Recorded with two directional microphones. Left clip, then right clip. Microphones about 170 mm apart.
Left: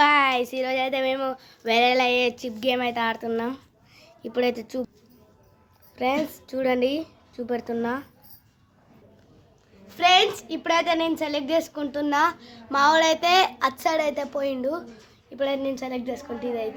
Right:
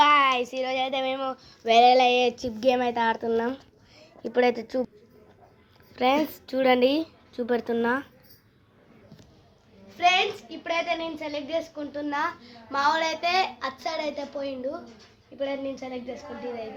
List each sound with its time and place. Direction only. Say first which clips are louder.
0.0 s child singing: even; 10° left (ahead or behind)
6.0 s a woman's voice: right 2 dB; 5° right (ahead or behind)
10.0 s a woman's voice: left 4 dB; 45° left (ahead or behind)